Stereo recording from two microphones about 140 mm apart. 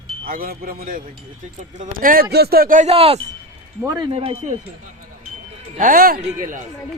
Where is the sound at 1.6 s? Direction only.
65° right (ahead or behind).